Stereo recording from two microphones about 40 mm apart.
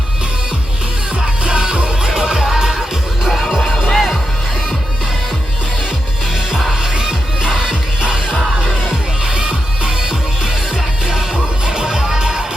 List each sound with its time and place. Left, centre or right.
2.0 s music: centre
3.2 s music: centre
6.9 s music: centre
11.6 s music: centre